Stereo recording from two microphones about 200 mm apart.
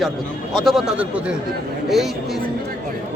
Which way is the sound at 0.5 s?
Centre (ahead or behind).